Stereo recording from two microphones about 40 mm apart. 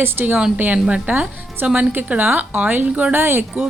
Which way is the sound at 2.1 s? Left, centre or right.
Right.